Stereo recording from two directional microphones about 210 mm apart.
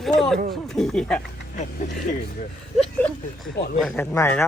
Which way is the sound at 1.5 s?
35° left (ahead or behind).